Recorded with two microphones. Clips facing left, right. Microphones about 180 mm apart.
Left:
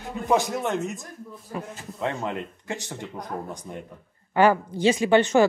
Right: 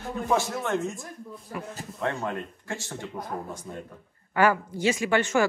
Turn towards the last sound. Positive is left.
turn(degrees=20)  # may be behind; listen again after turning